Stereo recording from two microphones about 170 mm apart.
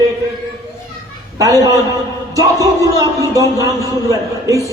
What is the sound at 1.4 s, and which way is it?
A man's voice, 20° right (ahead or behind).